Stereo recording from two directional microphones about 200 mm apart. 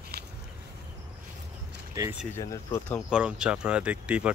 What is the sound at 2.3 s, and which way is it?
Speech, 15° left (ahead or behind).